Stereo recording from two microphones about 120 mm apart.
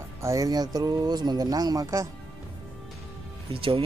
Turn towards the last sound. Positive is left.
turn(degrees=-50)  # may be behind; listen again after turning